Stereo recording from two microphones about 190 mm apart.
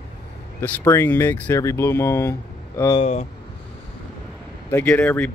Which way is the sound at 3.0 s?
35° left (ahead or behind).